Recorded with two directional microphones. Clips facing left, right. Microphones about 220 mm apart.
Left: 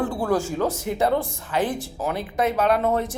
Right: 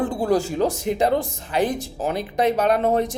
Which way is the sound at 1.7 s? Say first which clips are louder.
Right 2 dB; 40° right (ahead or behind).